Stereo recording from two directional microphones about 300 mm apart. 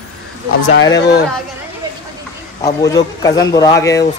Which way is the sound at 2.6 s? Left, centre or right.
Centre.